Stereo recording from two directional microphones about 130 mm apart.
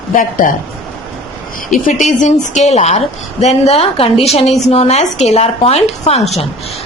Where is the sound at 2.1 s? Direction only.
70° left (ahead or behind).